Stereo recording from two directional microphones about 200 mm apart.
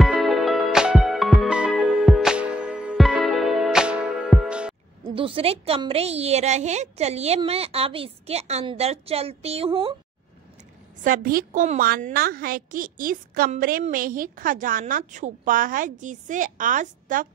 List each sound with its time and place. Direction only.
0.0 s music: centre (ahead or behind)
5.0 s a woman's voice: 25° right (ahead or behind)
11.1 s a woman's voice: 45° right (ahead or behind)